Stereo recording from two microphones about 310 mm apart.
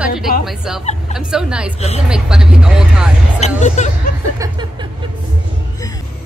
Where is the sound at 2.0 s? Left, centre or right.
Centre.